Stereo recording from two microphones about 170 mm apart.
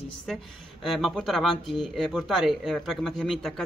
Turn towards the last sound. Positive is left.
turn(degrees=0)  # may be behind; listen again after turning